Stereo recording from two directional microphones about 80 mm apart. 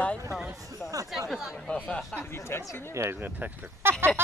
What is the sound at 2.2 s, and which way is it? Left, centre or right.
Speech, left.